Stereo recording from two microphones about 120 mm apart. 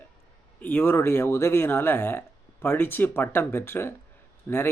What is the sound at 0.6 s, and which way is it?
Speech, 15° left (ahead or behind).